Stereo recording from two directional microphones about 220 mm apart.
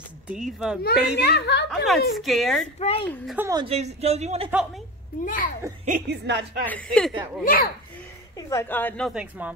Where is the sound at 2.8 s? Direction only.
25° left (ahead or behind).